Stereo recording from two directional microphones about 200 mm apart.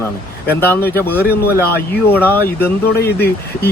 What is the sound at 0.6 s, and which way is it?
Speech, 10° left (ahead or behind).